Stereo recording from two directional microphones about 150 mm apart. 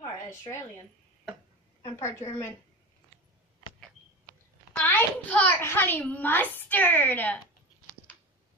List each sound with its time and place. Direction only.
2.0 s a child's voice: 20° left (ahead or behind)
3.6 s a sound: 30° left (ahead or behind)
4.7 s a child's voice: 15° left (ahead or behind)